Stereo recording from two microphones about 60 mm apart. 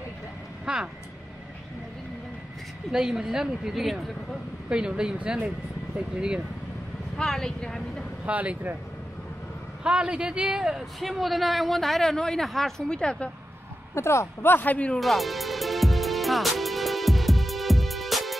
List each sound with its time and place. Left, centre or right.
0.7 s speech: centre
2.9 s speech: centre
4.6 s speech: centre
7.2 s speech: centre
8.3 s speech: right
9.8 s speech: centre
11.0 s a woman's voice: centre
13.9 s speech: left
14.5 s a man's voice: left
15.0 s music: centre